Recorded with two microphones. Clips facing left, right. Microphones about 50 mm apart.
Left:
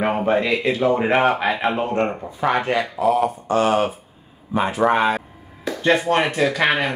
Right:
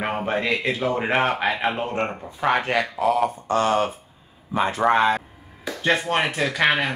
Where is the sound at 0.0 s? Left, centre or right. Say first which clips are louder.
Left 5 dB; centre.